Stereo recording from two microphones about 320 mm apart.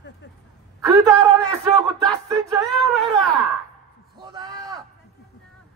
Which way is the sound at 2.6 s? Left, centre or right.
Centre.